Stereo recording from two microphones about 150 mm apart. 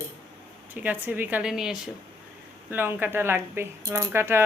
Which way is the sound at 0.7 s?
10° right (ahead or behind).